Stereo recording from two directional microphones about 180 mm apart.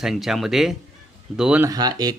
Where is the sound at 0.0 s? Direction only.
Centre (ahead or behind).